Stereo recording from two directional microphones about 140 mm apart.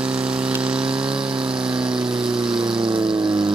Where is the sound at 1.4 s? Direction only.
5° right (ahead or behind).